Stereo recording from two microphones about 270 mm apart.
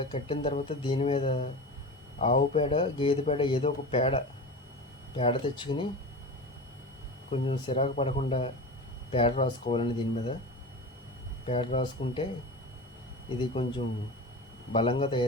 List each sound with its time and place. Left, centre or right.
0.0 s speech: left
7.3 s speech: left
11.4 s speech: left
13.4 s speech: left
14.7 s speech: centre